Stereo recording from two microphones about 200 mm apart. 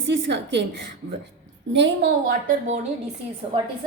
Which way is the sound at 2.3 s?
45° right (ahead or behind).